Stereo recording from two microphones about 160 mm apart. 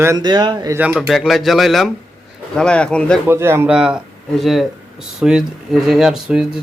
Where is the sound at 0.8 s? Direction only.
5° right (ahead or behind).